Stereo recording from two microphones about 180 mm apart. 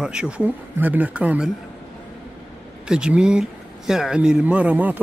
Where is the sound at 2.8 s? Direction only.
5° right (ahead or behind).